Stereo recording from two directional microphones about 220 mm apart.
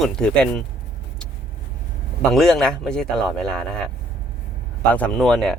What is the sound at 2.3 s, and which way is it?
Speech, centre (ahead or behind).